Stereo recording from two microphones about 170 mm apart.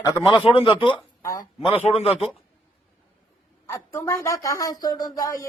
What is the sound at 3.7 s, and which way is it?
Speech, 20° left (ahead or behind).